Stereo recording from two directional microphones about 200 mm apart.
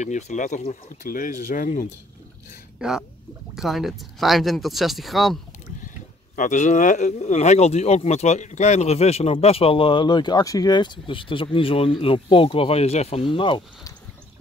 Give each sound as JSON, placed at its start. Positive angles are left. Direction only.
{"t": 0.0, "sound": "speech", "side_deg": 35}
{"t": 2.8, "sound": "speech", "side_deg": -5}
{"t": 6.3, "sound": "speech", "side_deg": 40}